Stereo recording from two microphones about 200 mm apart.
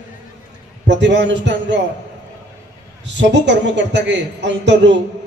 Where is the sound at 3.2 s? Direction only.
60° right (ahead or behind).